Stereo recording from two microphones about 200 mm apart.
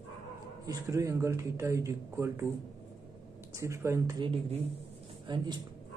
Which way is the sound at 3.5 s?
15° right (ahead or behind).